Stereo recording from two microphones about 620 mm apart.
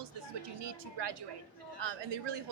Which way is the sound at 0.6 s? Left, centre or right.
Right.